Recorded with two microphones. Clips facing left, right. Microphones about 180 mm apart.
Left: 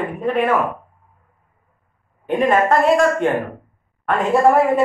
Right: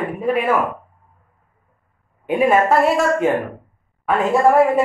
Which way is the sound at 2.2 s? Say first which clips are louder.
Right 1 dB; 5° right (ahead or behind).